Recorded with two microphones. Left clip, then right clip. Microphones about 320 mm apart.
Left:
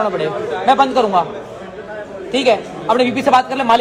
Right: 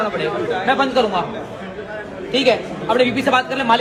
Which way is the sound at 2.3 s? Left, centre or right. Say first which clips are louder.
Left 2 dB; left.